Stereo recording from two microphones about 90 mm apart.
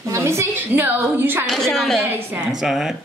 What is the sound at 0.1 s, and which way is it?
A woman's voice, 30° right (ahead or behind).